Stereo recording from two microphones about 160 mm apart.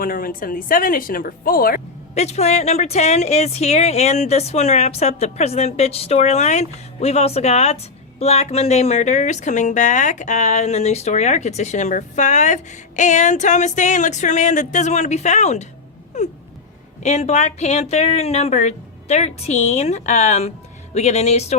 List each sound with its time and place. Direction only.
0.0 s speech: 65° left (ahead or behind)
2.1 s speech: 45° left (ahead or behind)
17.0 s speech: 45° left (ahead or behind)